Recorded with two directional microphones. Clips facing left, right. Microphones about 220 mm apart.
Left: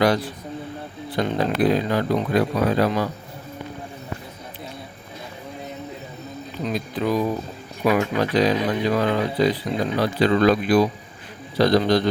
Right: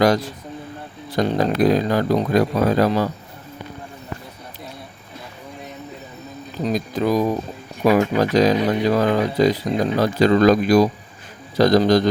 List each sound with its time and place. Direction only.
0.0 s speech: 45° right (ahead or behind)
6.7 s speech: 40° right (ahead or behind)